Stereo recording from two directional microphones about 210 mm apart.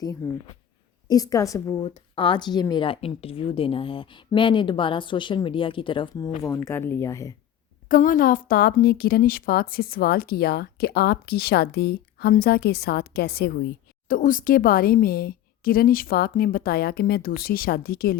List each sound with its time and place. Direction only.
0.0 s a woman's voice: 20° left (ahead or behind)
7.9 s a woman's voice: 40° left (ahead or behind)